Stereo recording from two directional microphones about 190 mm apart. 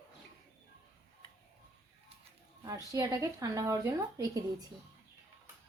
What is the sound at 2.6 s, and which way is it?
A woman's voice, 20° right (ahead or behind).